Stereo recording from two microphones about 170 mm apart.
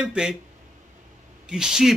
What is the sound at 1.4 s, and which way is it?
Speech, 5° right (ahead or behind).